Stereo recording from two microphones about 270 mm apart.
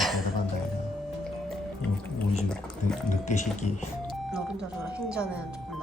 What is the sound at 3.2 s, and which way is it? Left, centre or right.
Speech, left.